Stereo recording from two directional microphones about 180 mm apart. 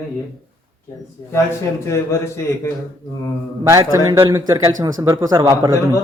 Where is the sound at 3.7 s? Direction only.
15° right (ahead or behind).